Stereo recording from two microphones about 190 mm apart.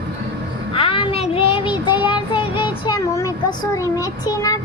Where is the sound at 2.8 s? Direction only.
15° left (ahead or behind).